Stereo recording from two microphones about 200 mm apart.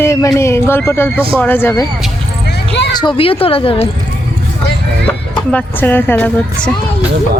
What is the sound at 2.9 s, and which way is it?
Speech, 25° left (ahead or behind).